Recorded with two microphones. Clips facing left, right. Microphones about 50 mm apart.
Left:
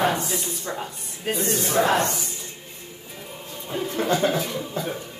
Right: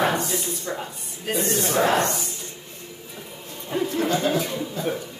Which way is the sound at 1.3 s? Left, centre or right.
Right.